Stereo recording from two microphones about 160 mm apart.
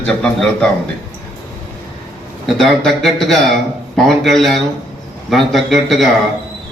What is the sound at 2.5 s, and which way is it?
Speech, centre (ahead or behind).